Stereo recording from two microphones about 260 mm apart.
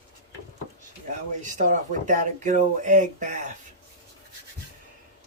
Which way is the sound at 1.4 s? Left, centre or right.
Right.